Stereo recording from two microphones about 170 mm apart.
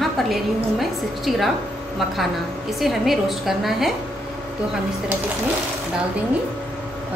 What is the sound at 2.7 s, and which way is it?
A woman's voice, centre (ahead or behind).